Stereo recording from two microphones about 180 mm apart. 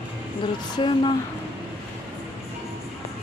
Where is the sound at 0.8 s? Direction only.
30° left (ahead or behind).